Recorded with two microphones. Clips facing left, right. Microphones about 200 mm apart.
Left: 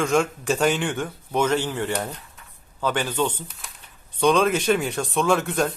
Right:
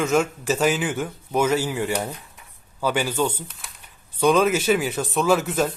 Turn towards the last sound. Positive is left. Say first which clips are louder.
# right 1 dB
turn(degrees=-5)  # may be behind; listen again after turning